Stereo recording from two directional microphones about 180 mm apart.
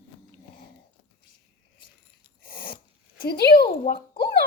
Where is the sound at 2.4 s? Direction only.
55° left (ahead or behind).